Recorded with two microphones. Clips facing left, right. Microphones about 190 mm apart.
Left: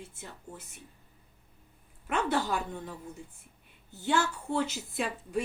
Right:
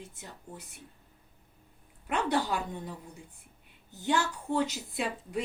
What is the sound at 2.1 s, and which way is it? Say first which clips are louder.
Speech: even; 15° right (ahead or behind).